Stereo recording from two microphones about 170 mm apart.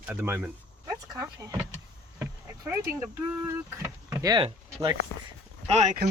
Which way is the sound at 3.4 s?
15° right (ahead or behind).